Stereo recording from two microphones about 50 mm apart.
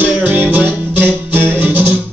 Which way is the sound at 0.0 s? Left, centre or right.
Right.